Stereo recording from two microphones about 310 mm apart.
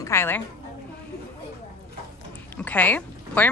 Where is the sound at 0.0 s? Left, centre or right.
Centre.